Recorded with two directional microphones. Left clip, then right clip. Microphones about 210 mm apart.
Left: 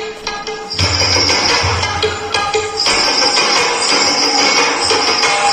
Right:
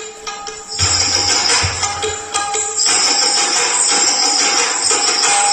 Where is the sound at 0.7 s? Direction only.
30° left (ahead or behind).